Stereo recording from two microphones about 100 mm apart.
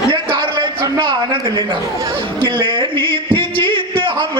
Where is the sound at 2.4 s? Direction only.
55° right (ahead or behind).